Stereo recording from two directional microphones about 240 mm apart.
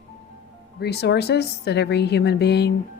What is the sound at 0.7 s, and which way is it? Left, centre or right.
A woman's voice, left.